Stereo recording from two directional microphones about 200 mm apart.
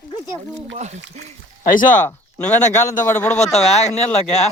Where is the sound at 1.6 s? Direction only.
40° left (ahead or behind).